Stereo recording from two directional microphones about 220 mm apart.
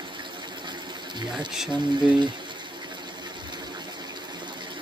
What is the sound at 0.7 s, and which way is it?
Water, 20° right (ahead or behind).